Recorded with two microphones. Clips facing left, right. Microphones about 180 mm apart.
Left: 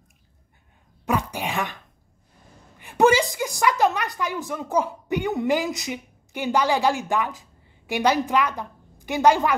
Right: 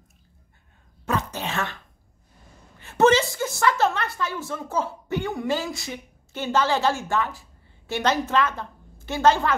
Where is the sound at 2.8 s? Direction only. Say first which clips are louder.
Even; 15° left (ahead or behind).